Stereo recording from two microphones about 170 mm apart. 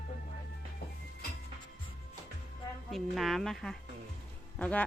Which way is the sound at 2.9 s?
Centre (ahead or behind).